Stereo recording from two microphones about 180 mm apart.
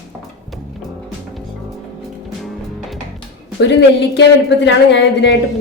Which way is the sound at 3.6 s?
70° left (ahead or behind).